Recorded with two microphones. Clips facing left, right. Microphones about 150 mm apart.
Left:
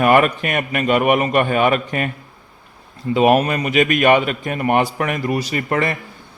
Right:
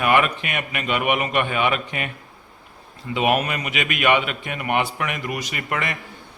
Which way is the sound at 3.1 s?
40° left (ahead or behind).